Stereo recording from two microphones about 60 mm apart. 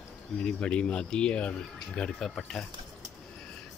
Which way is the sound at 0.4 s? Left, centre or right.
Centre.